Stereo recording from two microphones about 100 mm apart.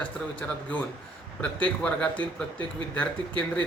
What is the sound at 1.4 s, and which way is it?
Speech, 10° left (ahead or behind).